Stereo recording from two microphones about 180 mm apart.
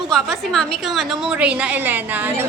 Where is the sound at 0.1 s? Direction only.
Centre (ahead or behind).